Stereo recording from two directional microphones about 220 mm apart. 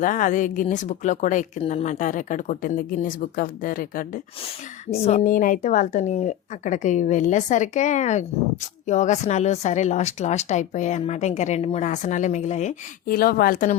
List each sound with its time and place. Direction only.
0.0 s speech: 35° left (ahead or behind)
4.9 s speech: 30° left (ahead or behind)